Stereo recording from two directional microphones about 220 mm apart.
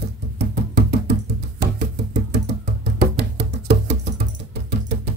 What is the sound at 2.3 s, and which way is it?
Music, 50° right (ahead or behind).